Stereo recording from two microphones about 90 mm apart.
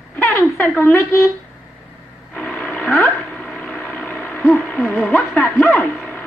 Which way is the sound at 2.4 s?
10° left (ahead or behind).